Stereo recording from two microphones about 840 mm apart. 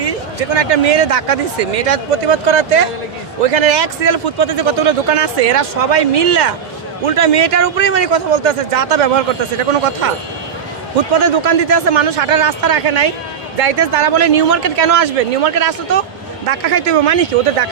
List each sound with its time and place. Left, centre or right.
0.5 s speech: right
10.9 s speech: right